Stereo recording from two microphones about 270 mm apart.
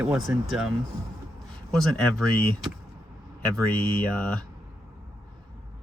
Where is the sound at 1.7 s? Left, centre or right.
Centre.